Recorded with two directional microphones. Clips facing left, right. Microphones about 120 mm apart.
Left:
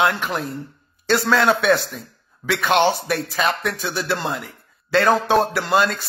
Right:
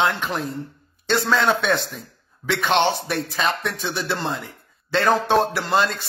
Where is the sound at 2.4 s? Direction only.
5° left (ahead or behind).